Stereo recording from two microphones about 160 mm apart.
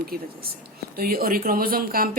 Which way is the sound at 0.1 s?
70° right (ahead or behind).